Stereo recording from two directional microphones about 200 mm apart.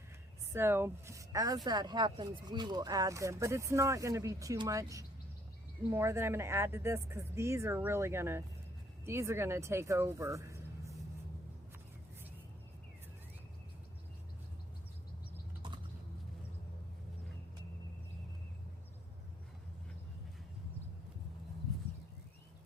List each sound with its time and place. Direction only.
0.5 s speech: 10° right (ahead or behind)